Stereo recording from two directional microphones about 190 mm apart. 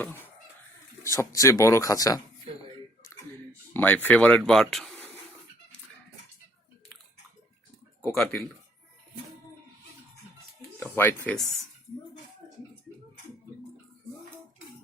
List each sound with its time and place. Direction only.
0.0 s speech: 10° left (ahead or behind)
3.7 s speech: 10° left (ahead or behind)
8.1 s speech: centre (ahead or behind)
10.8 s a sound: 10° left (ahead or behind)